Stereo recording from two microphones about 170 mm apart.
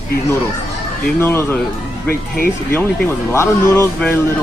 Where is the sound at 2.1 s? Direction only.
60° left (ahead or behind).